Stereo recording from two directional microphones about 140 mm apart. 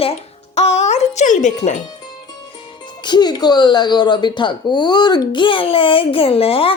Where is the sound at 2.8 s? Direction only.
30° left (ahead or behind).